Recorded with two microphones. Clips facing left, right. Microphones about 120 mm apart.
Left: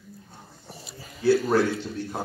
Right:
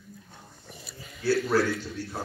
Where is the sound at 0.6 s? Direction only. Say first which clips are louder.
Left 3 dB; 35° left (ahead or behind).